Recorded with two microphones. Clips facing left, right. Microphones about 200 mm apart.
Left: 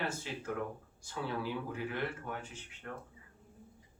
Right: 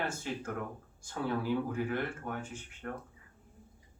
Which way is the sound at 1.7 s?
50° right (ahead or behind).